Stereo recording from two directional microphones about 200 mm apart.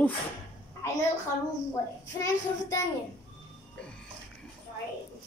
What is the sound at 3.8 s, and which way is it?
Music, 5° left (ahead or behind).